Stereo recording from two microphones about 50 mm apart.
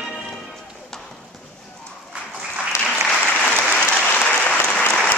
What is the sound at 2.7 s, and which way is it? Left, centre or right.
Applause, left.